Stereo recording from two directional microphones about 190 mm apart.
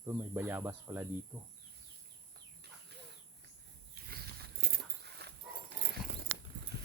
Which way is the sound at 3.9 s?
55° right (ahead or behind).